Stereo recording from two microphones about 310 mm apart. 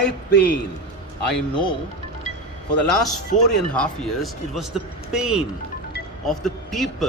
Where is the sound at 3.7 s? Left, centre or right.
Centre.